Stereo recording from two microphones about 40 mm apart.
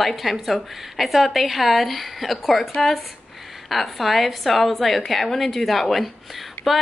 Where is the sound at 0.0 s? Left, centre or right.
Centre.